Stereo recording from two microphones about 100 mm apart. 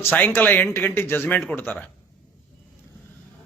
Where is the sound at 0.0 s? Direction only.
20° left (ahead or behind).